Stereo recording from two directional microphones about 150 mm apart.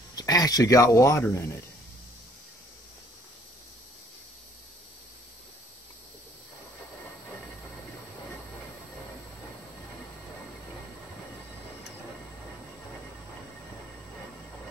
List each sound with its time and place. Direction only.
0.1 s speech: 25° left (ahead or behind)